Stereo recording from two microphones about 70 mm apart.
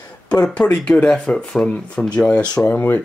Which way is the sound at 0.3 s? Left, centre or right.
Centre.